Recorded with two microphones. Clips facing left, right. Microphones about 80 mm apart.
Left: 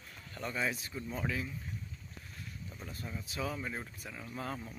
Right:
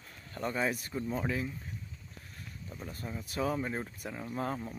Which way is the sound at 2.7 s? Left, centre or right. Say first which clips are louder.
Right 4 dB; right.